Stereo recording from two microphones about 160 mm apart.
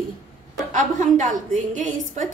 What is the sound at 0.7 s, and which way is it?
A woman's voice, 50° right (ahead or behind).